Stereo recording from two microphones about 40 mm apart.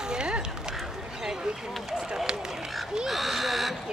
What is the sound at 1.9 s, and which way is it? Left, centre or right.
Run, centre.